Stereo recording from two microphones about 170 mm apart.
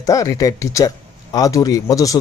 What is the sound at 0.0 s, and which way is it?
Speech, 20° left (ahead or behind).